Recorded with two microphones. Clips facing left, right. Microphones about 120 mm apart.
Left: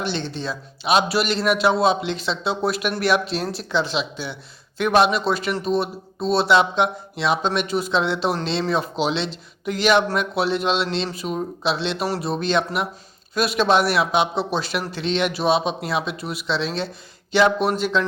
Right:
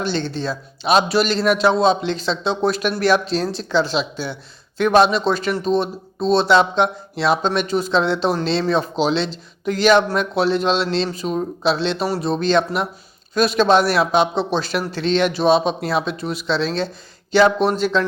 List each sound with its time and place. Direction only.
0.0 s speech: 35° right (ahead or behind)
16.0 s speech: 5° left (ahead or behind)
16.5 s speech: 35° right (ahead or behind)